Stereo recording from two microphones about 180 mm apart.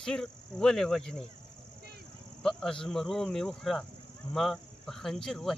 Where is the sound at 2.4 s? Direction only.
5° left (ahead or behind).